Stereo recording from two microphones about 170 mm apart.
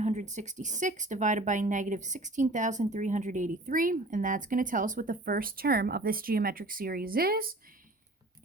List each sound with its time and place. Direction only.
0.0 s speech: 45° right (ahead or behind); by 7.5 s 60° right (ahead or behind)